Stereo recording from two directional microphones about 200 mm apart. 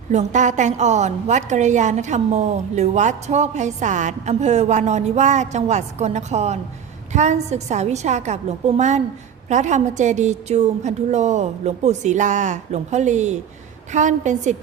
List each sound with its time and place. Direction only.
0.1 s a woman's voice: 35° right (ahead or behind)